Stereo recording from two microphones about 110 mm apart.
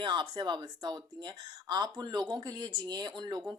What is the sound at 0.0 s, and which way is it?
Speech, 45° right (ahead or behind).